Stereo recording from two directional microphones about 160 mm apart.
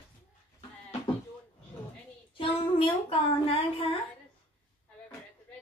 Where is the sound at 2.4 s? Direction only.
35° left (ahead or behind).